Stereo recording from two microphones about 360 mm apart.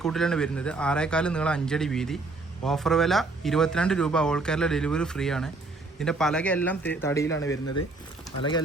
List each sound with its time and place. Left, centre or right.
0.0 s speech: centre
7.3 s speech: left